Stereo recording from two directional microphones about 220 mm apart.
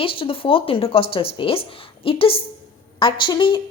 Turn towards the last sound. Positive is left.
turn(degrees=20)  # may be behind; listen again after turning